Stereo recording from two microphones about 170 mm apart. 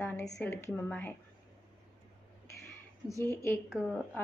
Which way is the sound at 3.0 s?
15° left (ahead or behind).